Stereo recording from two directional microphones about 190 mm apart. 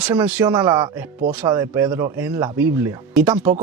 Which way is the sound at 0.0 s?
10° right (ahead or behind).